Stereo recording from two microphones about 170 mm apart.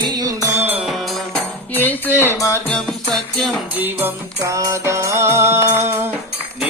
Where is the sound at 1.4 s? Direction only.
10° left (ahead or behind).